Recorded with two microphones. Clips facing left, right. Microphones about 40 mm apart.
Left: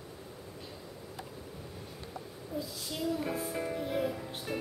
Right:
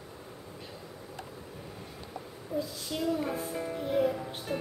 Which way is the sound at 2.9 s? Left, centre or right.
Centre.